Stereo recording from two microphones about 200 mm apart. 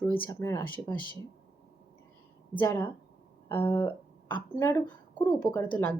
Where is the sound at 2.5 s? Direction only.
20° left (ahead or behind).